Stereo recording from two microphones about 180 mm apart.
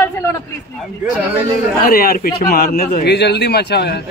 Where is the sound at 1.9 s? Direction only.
55° left (ahead or behind).